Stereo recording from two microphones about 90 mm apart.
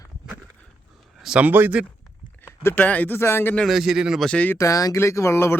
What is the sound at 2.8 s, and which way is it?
Speech, 15° left (ahead or behind).